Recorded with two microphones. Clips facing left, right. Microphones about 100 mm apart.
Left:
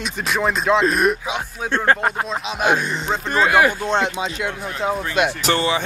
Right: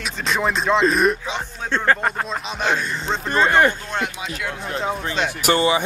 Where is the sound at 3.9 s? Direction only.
25° left (ahead or behind).